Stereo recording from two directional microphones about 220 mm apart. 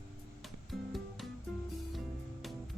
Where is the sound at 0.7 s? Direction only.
Centre (ahead or behind).